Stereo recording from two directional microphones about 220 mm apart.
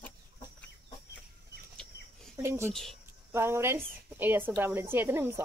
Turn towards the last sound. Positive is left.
turn(degrees=-10)  # may be behind; listen again after turning